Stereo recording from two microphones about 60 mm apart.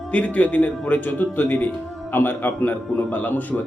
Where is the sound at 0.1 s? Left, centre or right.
Left.